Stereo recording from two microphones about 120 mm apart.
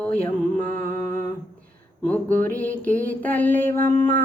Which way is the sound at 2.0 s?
15° left (ahead or behind).